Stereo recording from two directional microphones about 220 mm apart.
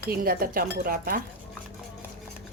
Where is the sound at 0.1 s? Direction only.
40° right (ahead or behind).